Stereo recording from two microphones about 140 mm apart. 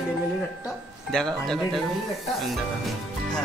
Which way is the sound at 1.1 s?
5° left (ahead or behind).